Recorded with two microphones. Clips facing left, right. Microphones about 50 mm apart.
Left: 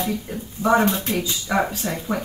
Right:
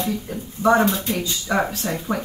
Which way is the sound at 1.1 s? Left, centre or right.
Centre.